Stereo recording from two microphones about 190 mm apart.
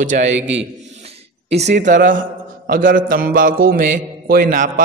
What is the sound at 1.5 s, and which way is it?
A man's voice, 35° right (ahead or behind).